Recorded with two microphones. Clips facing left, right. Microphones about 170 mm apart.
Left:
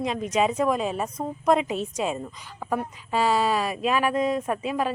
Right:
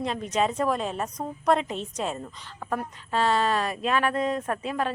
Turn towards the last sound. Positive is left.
turn(degrees=5)  # may be behind; listen again after turning